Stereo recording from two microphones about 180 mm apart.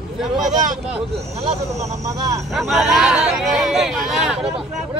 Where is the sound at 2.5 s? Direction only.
Centre (ahead or behind).